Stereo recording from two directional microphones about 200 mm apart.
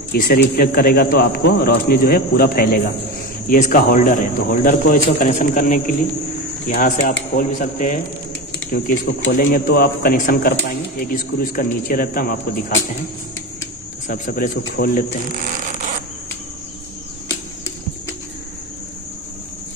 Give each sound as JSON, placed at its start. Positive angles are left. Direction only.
{"t": 0.1, "sound": "a man's voice", "side_deg": 50}
{"t": 14.0, "sound": "a man's voice", "side_deg": 45}